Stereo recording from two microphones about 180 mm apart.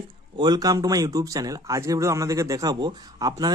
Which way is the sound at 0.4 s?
20° right (ahead or behind).